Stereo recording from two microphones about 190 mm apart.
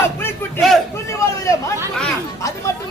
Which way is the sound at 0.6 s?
Centre (ahead or behind).